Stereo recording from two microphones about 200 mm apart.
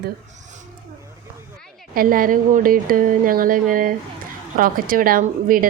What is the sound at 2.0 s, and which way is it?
A woman's voice, 45° right (ahead or behind).